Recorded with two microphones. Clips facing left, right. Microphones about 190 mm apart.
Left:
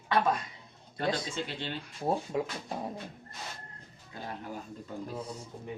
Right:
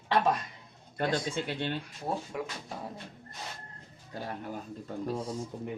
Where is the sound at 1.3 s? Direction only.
50° right (ahead or behind).